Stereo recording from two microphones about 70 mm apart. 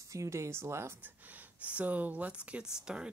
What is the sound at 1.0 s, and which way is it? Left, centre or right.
Speech, right.